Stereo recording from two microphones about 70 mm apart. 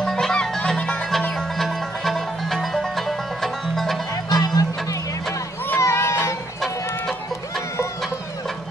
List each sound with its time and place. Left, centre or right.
0.0 s music: centre
1.3 s music: centre
4.4 s music: left
5.8 s a sound: left
6.6 s chicken: centre